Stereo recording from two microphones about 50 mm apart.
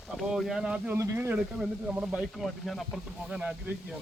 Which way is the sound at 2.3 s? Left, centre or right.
Centre.